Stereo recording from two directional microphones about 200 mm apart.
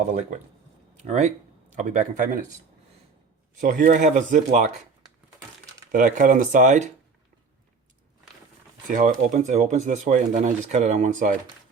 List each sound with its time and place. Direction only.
0.9 s speech: 35° right (ahead or behind)
3.6 s speech: 40° right (ahead or behind)
5.9 s speech: 40° right (ahead or behind)
8.9 s speech: 40° right (ahead or behind)